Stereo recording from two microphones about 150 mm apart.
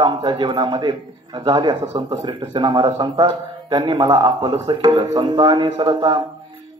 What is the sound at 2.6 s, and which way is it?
A man's voice, 25° right (ahead or behind).